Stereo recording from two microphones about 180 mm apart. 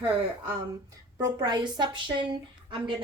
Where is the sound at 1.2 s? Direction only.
20° right (ahead or behind).